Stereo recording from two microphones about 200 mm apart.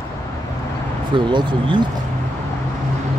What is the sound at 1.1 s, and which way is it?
Speech, 25° right (ahead or behind).